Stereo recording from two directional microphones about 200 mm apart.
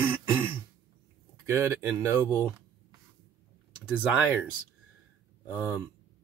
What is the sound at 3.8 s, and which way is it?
Speech, 5° right (ahead or behind).